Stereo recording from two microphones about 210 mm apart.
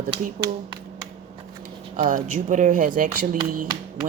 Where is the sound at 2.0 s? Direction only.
35° right (ahead or behind).